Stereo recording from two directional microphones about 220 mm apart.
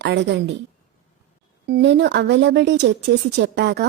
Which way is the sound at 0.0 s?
50° right (ahead or behind).